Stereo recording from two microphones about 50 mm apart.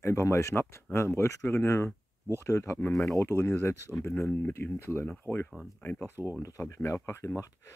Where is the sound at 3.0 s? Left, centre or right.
Left.